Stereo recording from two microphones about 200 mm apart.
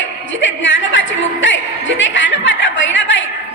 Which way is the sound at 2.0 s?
70° left (ahead or behind).